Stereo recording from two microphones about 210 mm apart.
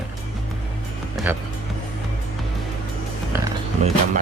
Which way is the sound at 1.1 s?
5° right (ahead or behind).